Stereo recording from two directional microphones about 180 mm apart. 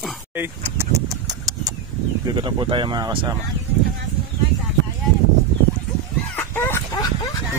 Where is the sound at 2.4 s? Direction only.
25° right (ahead or behind).